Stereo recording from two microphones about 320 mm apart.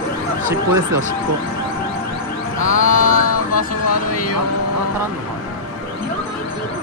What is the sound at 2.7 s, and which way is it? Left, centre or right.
Music, left.